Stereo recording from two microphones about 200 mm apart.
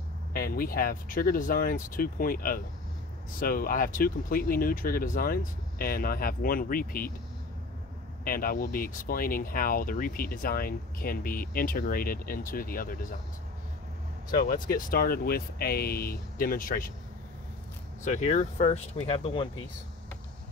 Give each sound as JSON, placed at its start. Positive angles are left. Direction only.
{"t": 0.3, "sound": "speech", "side_deg": 50}
{"t": 8.2, "sound": "speech", "side_deg": 45}
{"t": 14.3, "sound": "speech", "side_deg": 45}
{"t": 18.0, "sound": "speech", "side_deg": 35}